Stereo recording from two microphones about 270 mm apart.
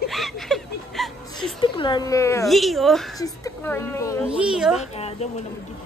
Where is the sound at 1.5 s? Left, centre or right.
Centre.